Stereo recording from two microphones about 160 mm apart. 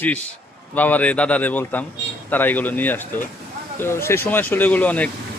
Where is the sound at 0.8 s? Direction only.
10° left (ahead or behind).